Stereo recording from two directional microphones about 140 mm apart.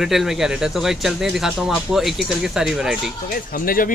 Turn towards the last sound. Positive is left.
turn(degrees=90)